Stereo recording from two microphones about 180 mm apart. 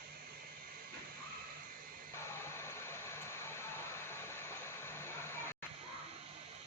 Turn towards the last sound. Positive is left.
turn(degrees=15)  # may be behind; listen again after turning